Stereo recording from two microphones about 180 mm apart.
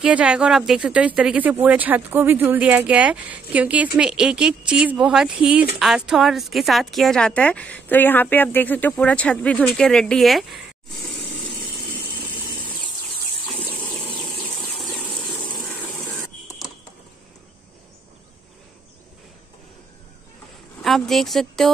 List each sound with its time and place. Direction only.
0.0 s speech: 5° right (ahead or behind)
12.2 s vehicle: 25° left (ahead or behind)
13.7 s vehicle: 5° left (ahead or behind)
15.5 s a sound: 5° left (ahead or behind)
20.8 s speech: centre (ahead or behind)